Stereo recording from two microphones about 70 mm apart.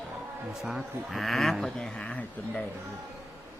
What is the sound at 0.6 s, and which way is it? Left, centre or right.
Speech, centre.